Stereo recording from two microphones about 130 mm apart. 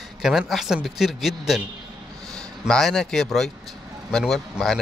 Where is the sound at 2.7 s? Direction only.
5° left (ahead or behind).